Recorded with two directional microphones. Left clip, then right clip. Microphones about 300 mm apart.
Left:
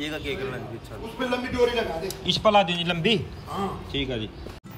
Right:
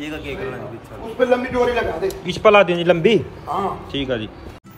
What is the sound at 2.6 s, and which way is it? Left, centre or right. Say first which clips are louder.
Speech: right 9 dB; centre.